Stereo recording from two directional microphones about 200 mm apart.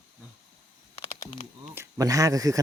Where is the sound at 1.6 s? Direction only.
15° right (ahead or behind).